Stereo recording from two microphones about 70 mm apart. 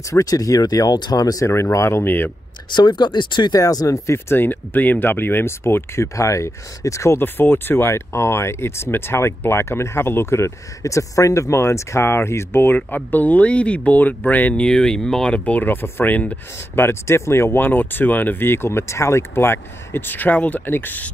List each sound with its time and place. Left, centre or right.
0.1 s speech: left
1.5 s speech: left
2.7 s speech: left
3.6 s speech: left
6.1 s speech: left
7.2 s speech: left